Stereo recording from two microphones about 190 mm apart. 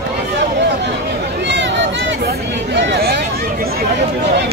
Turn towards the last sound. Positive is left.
turn(degrees=-60)  # may be behind; listen again after turning